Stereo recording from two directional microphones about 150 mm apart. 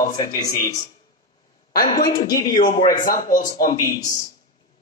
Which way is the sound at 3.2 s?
60° left (ahead or behind).